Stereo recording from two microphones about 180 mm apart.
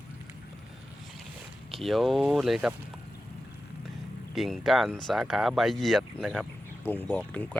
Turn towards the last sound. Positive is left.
turn(degrees=10)  # may be behind; listen again after turning